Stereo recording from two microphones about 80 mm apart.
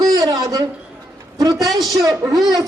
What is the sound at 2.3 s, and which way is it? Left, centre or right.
Speech, right.